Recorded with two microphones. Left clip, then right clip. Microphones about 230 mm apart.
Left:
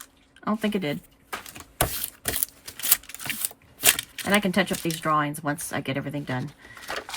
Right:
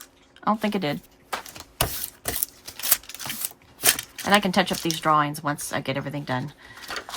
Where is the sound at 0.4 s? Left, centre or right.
Centre.